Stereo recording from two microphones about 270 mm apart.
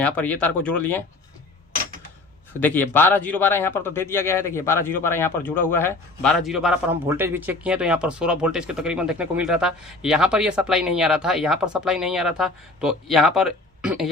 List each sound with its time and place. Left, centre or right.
0.0 s speech: centre
2.6 s speech: centre